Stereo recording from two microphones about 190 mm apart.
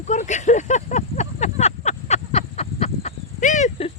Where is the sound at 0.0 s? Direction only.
40° left (ahead or behind).